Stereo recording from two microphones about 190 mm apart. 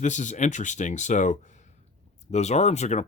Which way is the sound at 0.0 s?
40° left (ahead or behind).